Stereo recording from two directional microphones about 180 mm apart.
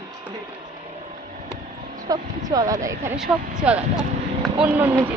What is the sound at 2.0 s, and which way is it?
Speech, 20° right (ahead or behind).